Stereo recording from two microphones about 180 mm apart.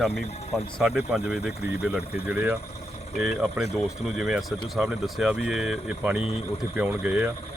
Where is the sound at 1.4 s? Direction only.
60° left (ahead or behind).